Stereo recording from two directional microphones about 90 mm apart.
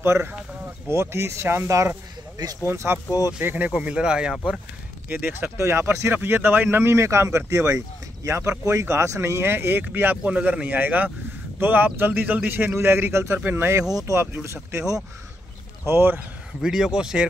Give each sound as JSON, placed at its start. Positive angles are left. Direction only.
{"t": 0.0, "sound": "speech", "side_deg": -30}
{"t": 3.1, "sound": "speech", "side_deg": 45}
{"t": 3.4, "sound": "speech", "side_deg": -20}
{"t": 5.1, "sound": "speech", "side_deg": -20}
{"t": 13.9, "sound": "speech", "side_deg": -40}
{"t": 16.6, "sound": "speech", "side_deg": -5}